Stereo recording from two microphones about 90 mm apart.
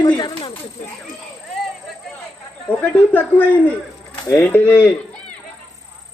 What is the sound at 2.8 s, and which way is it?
A man's voice, 15° left (ahead or behind).